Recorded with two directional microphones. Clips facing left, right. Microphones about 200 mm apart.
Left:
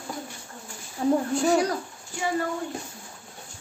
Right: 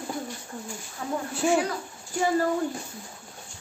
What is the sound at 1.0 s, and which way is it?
Speech, 30° left (ahead or behind).